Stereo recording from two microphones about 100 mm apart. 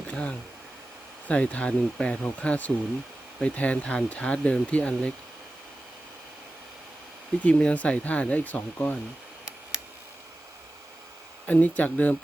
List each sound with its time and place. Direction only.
0.1 s speech: 10° left (ahead or behind)
7.4 s speech: 15° left (ahead or behind)
11.4 s speech: 15° left (ahead or behind)